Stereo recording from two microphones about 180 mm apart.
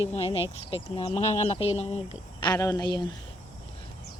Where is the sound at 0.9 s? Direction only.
35° left (ahead or behind).